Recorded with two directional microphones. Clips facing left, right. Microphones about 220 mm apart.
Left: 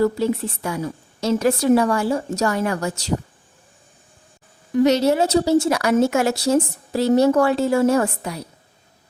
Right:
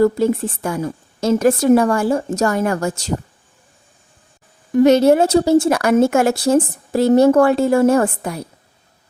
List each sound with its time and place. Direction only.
0.0 s speech: 50° right (ahead or behind)
4.7 s speech: 50° right (ahead or behind)